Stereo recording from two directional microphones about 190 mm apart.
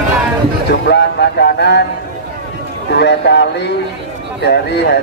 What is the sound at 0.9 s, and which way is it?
Speech, 65° left (ahead or behind).